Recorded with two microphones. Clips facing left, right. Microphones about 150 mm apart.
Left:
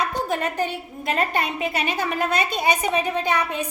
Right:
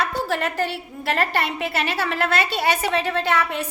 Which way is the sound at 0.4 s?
15° left (ahead or behind).